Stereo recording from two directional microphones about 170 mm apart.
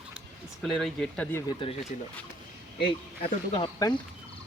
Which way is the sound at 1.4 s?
30° left (ahead or behind).